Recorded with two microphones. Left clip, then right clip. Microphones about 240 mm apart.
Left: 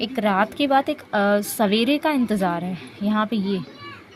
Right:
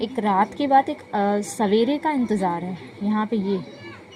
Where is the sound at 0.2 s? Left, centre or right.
Left.